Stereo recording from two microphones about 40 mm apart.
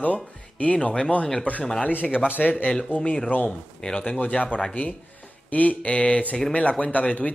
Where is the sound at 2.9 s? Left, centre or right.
Left.